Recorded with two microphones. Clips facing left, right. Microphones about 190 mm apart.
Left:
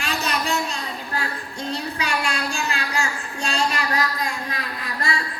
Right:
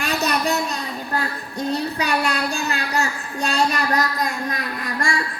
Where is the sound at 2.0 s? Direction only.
40° right (ahead or behind).